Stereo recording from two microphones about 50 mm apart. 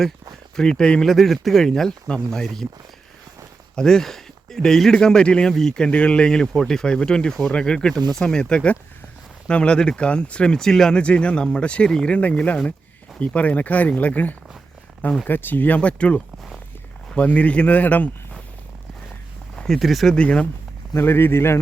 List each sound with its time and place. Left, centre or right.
0.5 s speech: centre
1.0 s speech: centre
3.8 s speech: centre
5.9 s speech: left
10.6 s speech: centre
17.2 s a man's voice: left
19.5 s a sound: centre
19.8 s speech: centre
20.1 s speech: left
21.0 s speech: left